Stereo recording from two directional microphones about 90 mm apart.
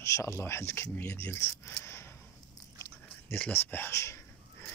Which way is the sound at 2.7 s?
25° left (ahead or behind).